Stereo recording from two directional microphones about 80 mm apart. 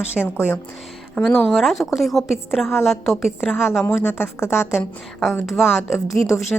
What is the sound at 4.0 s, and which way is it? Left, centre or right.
Speech, left.